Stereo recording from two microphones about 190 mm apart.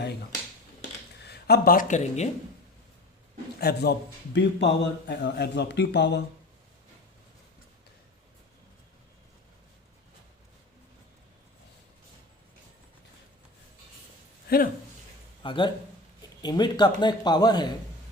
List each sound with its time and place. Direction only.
1.2 s speech: 60° left (ahead or behind); by 2.3 s 35° left (ahead or behind)
3.6 s speech: 55° left (ahead or behind)
14.4 s a sound: 50° left (ahead or behind)
15.4 s speech: 25° left (ahead or behind)